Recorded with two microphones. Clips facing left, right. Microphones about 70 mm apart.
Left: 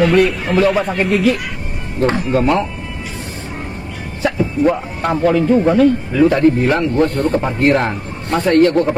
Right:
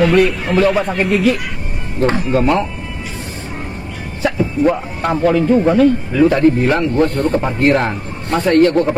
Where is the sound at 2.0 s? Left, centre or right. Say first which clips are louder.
Even; centre.